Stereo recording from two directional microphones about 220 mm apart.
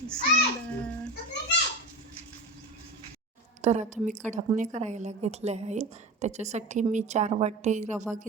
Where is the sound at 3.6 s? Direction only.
30° right (ahead or behind).